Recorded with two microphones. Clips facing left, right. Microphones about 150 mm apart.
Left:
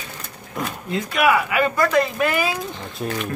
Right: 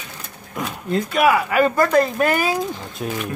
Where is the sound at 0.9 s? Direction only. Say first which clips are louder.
Right 2 dB; 40° right (ahead or behind).